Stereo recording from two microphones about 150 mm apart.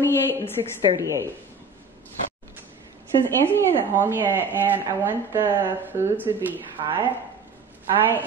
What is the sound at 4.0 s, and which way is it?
A woman's voice, 15° right (ahead or behind).